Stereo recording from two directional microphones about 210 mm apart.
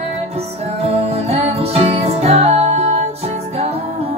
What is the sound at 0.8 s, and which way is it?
Music, 30° right (ahead or behind).